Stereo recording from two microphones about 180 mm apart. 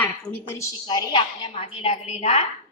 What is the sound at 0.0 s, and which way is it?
Speech, 10° left (ahead or behind).